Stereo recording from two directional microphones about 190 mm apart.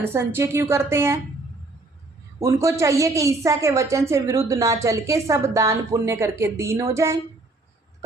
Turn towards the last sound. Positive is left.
turn(degrees=-15)  # may be behind; listen again after turning